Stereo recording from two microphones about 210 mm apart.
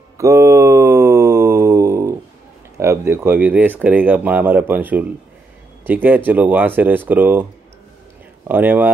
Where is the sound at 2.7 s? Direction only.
15° right (ahead or behind).